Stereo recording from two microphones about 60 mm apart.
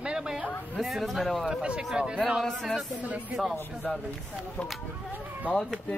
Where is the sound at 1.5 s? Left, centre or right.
Centre.